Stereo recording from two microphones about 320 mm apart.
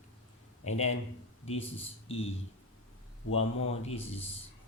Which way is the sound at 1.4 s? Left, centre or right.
Centre.